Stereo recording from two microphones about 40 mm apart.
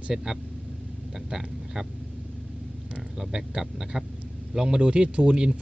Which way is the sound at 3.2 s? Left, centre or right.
Centre.